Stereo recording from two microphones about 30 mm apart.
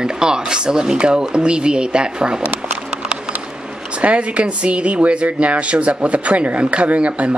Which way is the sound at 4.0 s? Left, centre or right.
Right.